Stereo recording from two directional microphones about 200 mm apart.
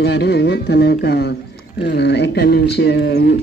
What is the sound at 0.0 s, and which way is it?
A man's voice, 55° left (ahead or behind).